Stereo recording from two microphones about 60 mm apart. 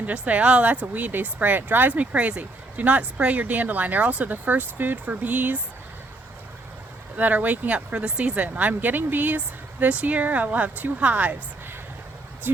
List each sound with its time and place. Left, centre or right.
0.0 s speech: right
7.2 s speech: right
12.5 s speech: right